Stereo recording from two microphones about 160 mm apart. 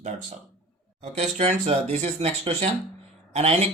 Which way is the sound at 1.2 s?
45° right (ahead or behind).